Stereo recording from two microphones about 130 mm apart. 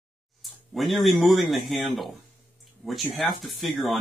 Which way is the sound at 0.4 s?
Centre (ahead or behind).